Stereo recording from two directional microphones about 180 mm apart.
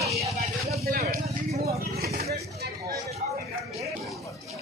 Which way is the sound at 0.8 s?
55° right (ahead or behind).